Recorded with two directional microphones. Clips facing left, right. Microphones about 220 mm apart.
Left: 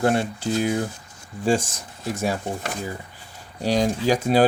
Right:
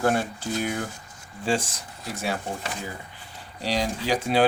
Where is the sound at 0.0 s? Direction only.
30° left (ahead or behind).